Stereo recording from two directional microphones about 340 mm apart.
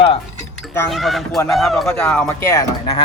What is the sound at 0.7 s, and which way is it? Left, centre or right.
Speech, centre.